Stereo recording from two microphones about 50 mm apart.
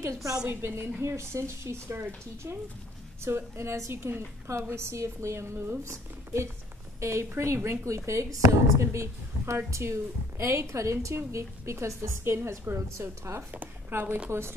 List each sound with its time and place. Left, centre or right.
0.0 s a woman's voice: right
0.5 s a woman's voice: right
3.9 s a woman's voice: right
4.5 s a woman's voice: right
11.3 s a woman's voice: right
13.5 s speech: right